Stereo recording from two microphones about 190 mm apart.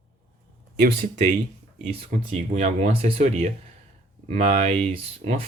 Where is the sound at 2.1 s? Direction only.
35° right (ahead or behind).